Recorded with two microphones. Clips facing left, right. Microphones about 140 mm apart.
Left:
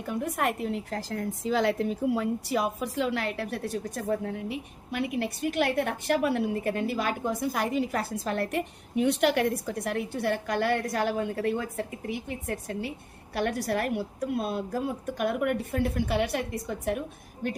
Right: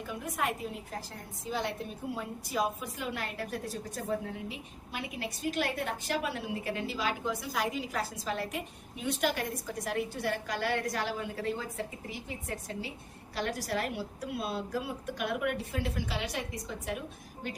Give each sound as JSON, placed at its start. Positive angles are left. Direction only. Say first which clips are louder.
{"t": 0.1, "sound": "a woman's voice", "louder": "left 6 dB", "side_deg": 60}